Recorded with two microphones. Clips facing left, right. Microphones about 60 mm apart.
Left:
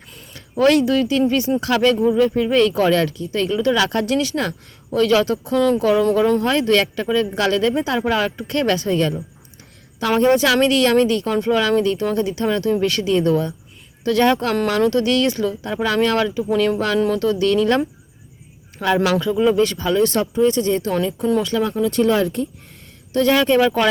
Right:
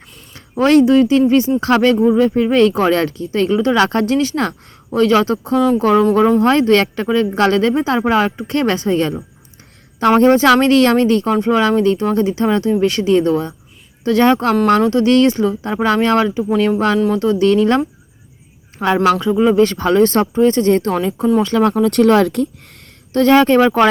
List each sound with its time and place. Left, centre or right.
0.3 s speech: right
18.8 s speech: right
19.2 s speech: right
19.5 s speech: right
20.9 s speech: right
21.4 s speech: right
21.7 s speech: right
23.1 s speech: right